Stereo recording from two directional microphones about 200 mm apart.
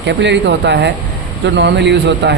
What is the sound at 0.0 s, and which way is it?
A man's voice, 60° right (ahead or behind).